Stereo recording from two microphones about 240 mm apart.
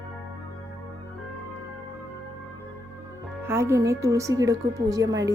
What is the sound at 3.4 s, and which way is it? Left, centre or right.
A woman's voice, centre.